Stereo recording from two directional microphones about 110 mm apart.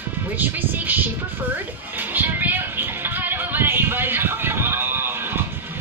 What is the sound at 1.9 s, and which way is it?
Music, 15° right (ahead or behind).